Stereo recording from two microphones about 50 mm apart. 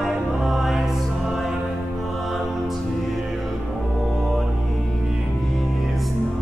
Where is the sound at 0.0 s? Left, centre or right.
Centre.